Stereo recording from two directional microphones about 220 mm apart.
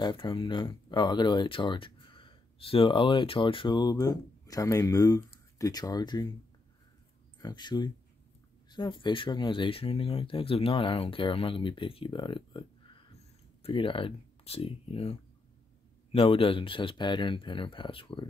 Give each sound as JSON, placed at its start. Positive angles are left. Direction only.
{"t": 0.0, "sound": "speech", "side_deg": 20}
{"t": 7.3, "sound": "speech", "side_deg": 20}